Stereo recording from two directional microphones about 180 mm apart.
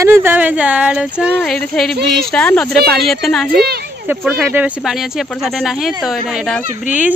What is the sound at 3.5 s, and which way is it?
Speech, 60° right (ahead or behind).